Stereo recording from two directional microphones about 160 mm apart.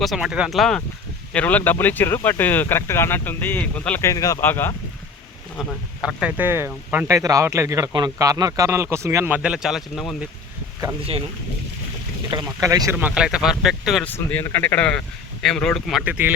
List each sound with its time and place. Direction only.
0.0 s speech: centre (ahead or behind); by 4.7 s 15° left (ahead or behind)
5.5 s speech: centre (ahead or behind)
12.3 s speech: 20° right (ahead or behind)
13.0 s speech: 10° right (ahead or behind)
14.0 s speech: 10° left (ahead or behind)
16.0 s speech: 10° right (ahead or behind)